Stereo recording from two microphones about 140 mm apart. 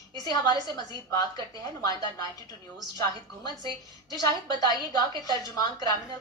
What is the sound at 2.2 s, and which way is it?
Speech, 30° left (ahead or behind).